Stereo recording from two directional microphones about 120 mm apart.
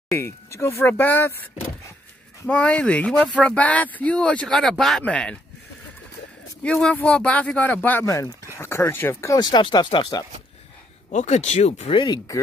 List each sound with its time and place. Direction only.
0.1 s speech: 20° left (ahead or behind)
6.6 s speech: 10° left (ahead or behind)
8.1 s speech: 25° left (ahead or behind); by 10.2 s 40° left (ahead or behind)
11.1 s speech: 80° left
11.9 s speech: 40° left (ahead or behind)